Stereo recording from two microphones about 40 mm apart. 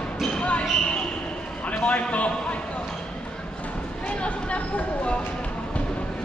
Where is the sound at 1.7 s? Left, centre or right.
Left.